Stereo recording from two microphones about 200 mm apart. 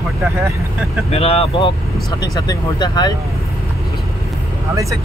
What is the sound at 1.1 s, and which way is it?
Speech, 30° left (ahead or behind).